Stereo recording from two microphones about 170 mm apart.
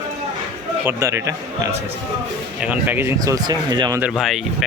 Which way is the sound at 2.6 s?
10° right (ahead or behind).